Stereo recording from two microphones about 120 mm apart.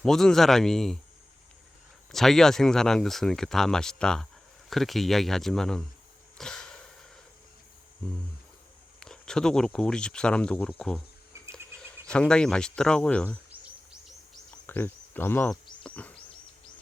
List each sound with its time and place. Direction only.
0.0 s speech: 5° left (ahead or behind)
2.1 s speech: 5° left (ahead or behind)
6.3 s a sound: 5° left (ahead or behind)
9.0 s speech: 5° left (ahead or behind)
11.3 s cricket: 25° right (ahead or behind)
12.0 s speech: 10° left (ahead or behind)
14.7 s speech: 15° left (ahead or behind)
15.8 s a sound: 10° left (ahead or behind)